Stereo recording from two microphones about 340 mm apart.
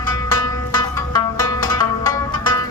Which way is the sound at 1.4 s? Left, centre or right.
Centre.